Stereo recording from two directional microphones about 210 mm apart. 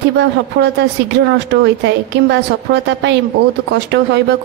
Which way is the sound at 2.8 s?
55° right (ahead or behind).